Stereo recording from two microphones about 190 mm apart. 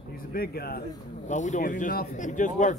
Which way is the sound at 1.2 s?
40° left (ahead or behind).